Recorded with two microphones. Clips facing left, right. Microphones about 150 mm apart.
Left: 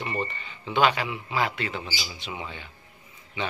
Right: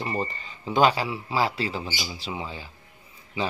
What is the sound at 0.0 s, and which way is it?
Speech, 35° right (ahead or behind).